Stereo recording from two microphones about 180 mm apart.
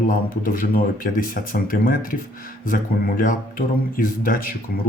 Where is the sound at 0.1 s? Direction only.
50° left (ahead or behind).